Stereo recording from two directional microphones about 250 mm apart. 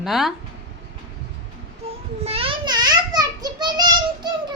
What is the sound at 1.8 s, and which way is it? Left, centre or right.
Child singing, right.